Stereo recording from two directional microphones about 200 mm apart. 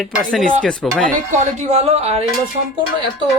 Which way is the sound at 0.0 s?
Centre (ahead or behind).